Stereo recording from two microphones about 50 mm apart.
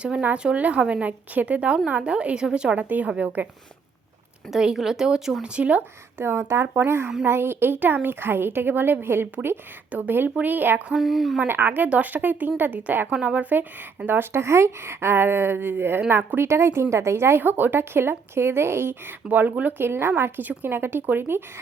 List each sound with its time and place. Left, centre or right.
0.3 s a woman's voice: centre
4.5 s speech: centre
5.5 s a woman's voice: right
6.1 s speech: right
10.9 s speech: centre
11.4 s speech: right
13.1 s speech: right
14.3 s speech: right
17.4 s speech: right
19.3 s speech: right
19.8 s speech: right